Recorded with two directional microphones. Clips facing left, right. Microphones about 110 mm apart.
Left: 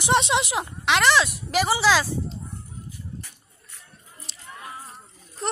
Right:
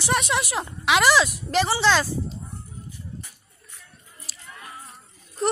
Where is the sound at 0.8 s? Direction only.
5° right (ahead or behind).